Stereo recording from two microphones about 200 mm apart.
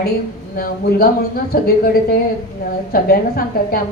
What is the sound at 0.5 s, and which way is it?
A woman's voice, 50° left (ahead or behind).